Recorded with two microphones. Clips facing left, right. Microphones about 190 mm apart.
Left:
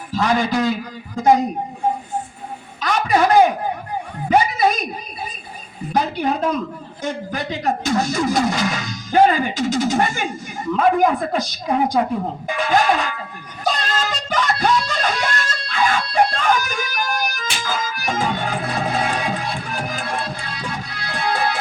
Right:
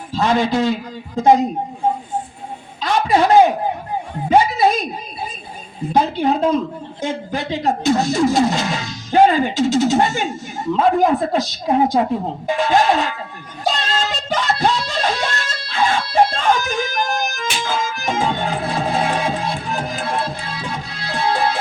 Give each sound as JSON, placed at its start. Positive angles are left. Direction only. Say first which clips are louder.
{"t": 0.1, "sound": "speech", "louder": "right 2 dB", "side_deg": -25}
{"t": 2.8, "sound": "a sound", "louder": "right 2 dB", "side_deg": -25}
{"t": 4.3, "sound": "a woman's voice", "louder": "right 2 dB", "side_deg": -25}
{"t": 5.9, "sound": "speech", "louder": "right 3 dB", "side_deg": -25}
{"t": 13.7, "sound": "music", "louder": "right 1 dB", "side_deg": -25}